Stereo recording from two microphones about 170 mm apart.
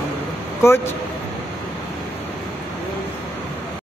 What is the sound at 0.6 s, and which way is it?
Speech, 15° left (ahead or behind).